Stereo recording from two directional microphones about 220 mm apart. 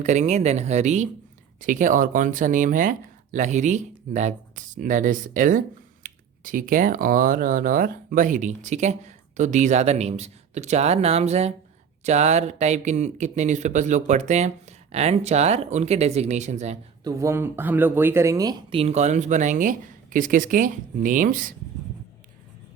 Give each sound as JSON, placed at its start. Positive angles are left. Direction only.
{"t": 0.0, "sound": "speech", "side_deg": -35}
{"t": 17.0, "sound": "speech", "side_deg": -15}